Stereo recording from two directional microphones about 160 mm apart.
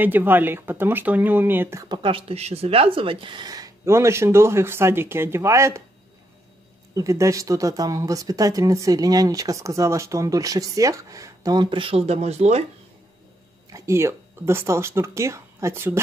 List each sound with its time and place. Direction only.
0.0 s speech: 10° right (ahead or behind)
1.9 s speech: 35° right (ahead or behind); by 5.8 s 15° right (ahead or behind)
7.0 s speech: 20° right (ahead or behind); by 12.6 s 40° right (ahead or behind)
13.7 s speech: 20° right (ahead or behind)